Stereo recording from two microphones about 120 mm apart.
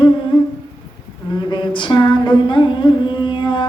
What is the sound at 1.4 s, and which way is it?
Carnatic music, 40° left (ahead or behind).